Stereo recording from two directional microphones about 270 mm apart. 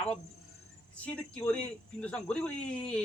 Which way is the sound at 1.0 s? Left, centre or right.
Centre.